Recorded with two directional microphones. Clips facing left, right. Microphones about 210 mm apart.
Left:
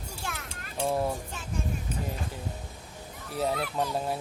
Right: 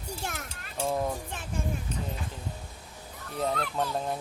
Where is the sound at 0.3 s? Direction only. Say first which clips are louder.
Right 1 dB; 40° right (ahead or behind).